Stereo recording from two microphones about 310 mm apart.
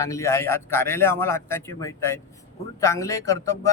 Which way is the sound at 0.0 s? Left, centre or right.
Centre.